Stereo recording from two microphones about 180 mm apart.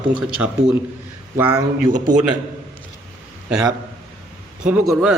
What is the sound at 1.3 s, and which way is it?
Speech, 10° right (ahead or behind).